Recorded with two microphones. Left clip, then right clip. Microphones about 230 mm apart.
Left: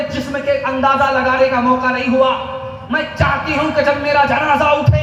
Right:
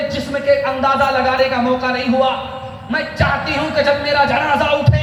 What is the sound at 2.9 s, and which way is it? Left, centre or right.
Speech, right.